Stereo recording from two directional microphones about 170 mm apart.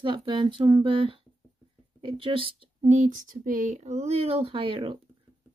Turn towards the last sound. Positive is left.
turn(degrees=-30)  # may be behind; listen again after turning